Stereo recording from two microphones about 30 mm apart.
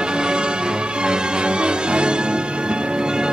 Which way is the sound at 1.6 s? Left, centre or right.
Right.